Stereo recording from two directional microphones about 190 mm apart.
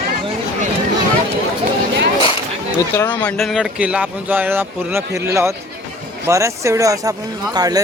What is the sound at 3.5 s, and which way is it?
A man's voice, 5° right (ahead or behind).